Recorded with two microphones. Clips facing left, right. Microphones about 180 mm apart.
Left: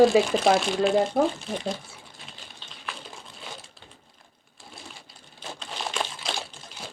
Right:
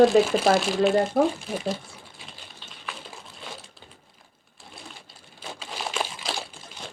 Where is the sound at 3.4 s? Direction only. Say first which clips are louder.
Right 2 dB; centre (ahead or behind).